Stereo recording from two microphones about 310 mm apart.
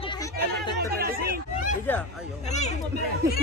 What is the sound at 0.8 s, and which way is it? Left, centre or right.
Chatter, right.